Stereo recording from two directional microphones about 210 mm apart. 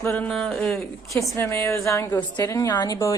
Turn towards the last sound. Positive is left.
turn(degrees=15)  # may be behind; listen again after turning